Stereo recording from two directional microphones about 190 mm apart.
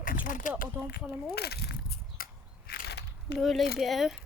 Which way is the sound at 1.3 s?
60° left (ahead or behind).